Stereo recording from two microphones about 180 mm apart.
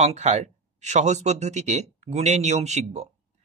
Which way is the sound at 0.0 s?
40° right (ahead or behind).